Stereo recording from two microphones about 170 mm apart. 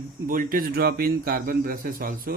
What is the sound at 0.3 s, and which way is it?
Speech, 55° right (ahead or behind).